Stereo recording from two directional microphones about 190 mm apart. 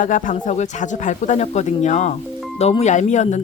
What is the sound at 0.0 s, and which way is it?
Speech, 40° left (ahead or behind).